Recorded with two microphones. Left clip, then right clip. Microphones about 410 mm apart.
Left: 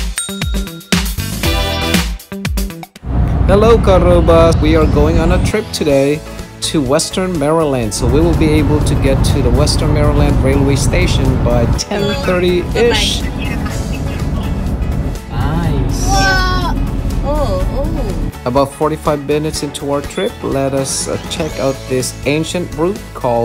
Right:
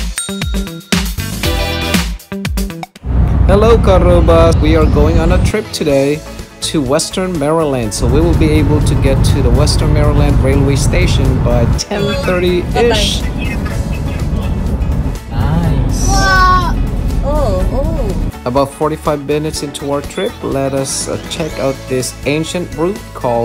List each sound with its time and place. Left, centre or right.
0.3 s music: centre
3.4 s speech: centre
18.0 s speech: centre